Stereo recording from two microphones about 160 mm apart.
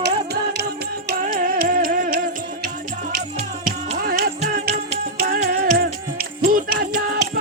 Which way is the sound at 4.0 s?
70° right (ahead or behind).